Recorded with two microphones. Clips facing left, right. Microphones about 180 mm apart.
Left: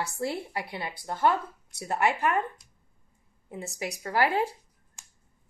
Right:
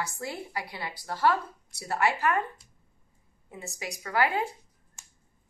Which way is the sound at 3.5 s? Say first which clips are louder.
Left 4 dB; 30° left (ahead or behind).